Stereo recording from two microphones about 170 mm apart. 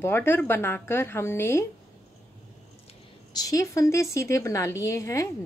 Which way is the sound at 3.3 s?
20° left (ahead or behind).